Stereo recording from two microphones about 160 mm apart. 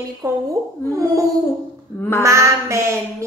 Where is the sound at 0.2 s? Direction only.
20° right (ahead or behind).